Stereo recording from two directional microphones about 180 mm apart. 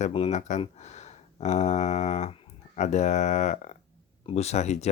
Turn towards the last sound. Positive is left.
turn(degrees=40)  # may be behind; listen again after turning